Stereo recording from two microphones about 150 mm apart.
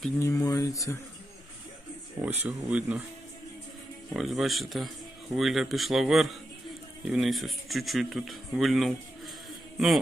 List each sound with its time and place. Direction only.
0.2 s speech: 20° left (ahead or behind)
2.4 s speech: 10° right (ahead or behind)
4.1 s a man's voice: centre (ahead or behind)